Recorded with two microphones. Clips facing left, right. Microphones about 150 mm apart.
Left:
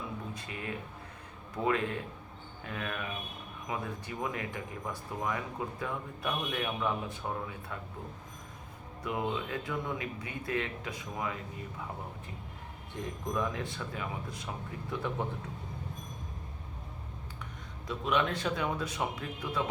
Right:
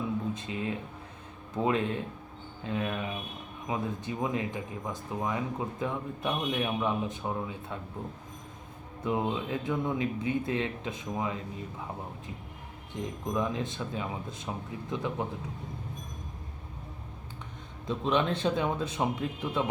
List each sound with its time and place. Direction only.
0.3 s a sound: 25° right (ahead or behind)
1.5 s speech: 20° right (ahead or behind)
9.0 s speech: 25° right (ahead or behind)
13.0 s speech: 20° right (ahead or behind)
17.8 s speech: 25° right (ahead or behind)